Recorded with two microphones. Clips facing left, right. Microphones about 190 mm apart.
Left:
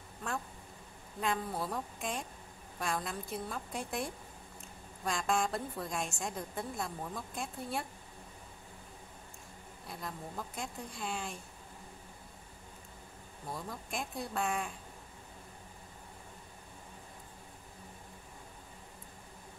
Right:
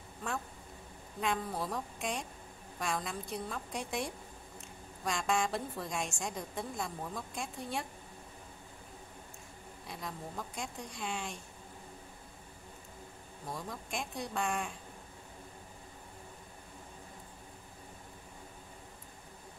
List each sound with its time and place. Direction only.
1.2 s a woman's voice: centre (ahead or behind)
9.8 s a woman's voice: centre (ahead or behind)
13.5 s a woman's voice: centre (ahead or behind)